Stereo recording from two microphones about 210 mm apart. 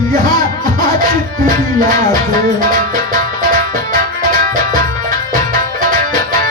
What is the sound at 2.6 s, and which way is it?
Music, 40° right (ahead or behind).